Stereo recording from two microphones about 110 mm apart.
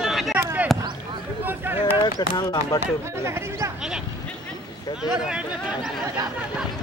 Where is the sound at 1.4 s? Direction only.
20° right (ahead or behind).